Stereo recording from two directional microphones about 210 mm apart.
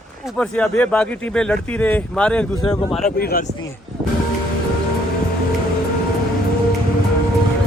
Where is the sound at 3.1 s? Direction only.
45° left (ahead or behind).